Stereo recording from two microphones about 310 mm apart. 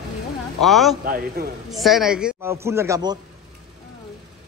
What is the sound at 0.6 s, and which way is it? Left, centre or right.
Speech, centre.